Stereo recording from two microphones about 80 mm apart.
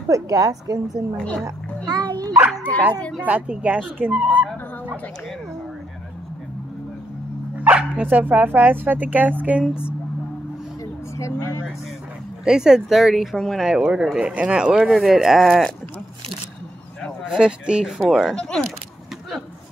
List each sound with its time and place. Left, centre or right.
0.1 s a woman's voice: right
1.1 s speech: centre
1.9 s a sound: right
2.6 s speech: centre
3.2 s speech: centre
7.5 s speech: centre
11.1 s speech: left
12.4 s speech: centre
17.2 s speech: centre
18.3 s speech: centre